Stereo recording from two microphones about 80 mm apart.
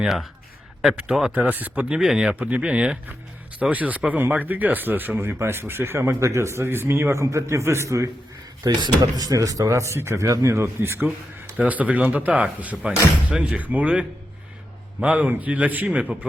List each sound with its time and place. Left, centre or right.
0.0 s speech: centre
1.4 s speech: right
8.6 s speech: right
11.5 s speech: centre